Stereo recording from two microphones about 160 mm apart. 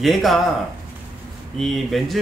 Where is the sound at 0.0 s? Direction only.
Centre (ahead or behind).